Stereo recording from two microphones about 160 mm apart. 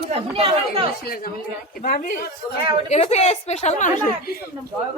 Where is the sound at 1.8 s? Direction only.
60° left (ahead or behind).